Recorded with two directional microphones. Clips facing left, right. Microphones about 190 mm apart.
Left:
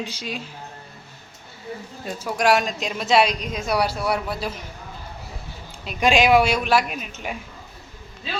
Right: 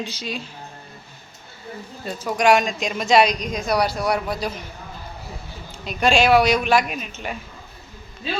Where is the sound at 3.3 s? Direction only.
40° right (ahead or behind).